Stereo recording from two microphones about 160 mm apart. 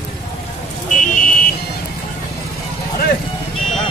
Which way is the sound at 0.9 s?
55° left (ahead or behind).